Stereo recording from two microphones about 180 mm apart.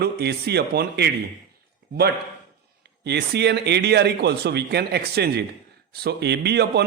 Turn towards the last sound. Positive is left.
turn(degrees=-65)  # may be behind; listen again after turning